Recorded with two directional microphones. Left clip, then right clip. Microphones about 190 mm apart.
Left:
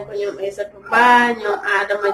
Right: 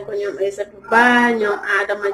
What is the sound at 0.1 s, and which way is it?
Speech, 15° right (ahead or behind).